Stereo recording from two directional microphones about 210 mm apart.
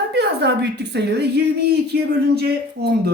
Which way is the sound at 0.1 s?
55° right (ahead or behind).